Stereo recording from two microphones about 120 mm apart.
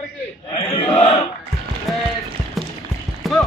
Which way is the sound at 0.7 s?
60° left (ahead or behind).